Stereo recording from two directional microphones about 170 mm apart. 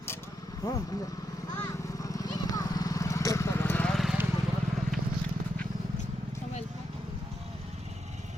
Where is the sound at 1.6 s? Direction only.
20° left (ahead or behind); by 4.1 s centre (ahead or behind).